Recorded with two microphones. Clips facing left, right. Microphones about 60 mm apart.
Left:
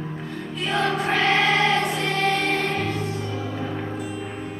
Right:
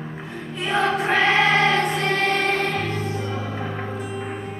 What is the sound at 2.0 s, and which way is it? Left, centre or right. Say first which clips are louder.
Music: right 1 dB; right.